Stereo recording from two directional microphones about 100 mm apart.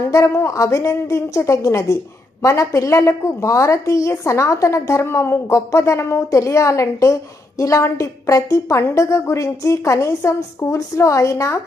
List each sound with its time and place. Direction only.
0.1 s a woman's voice: 30° left (ahead or behind)